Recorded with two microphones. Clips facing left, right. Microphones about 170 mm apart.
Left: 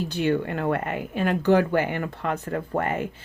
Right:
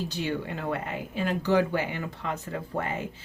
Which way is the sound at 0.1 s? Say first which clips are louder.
Left 7 dB; 55° left (ahead or behind).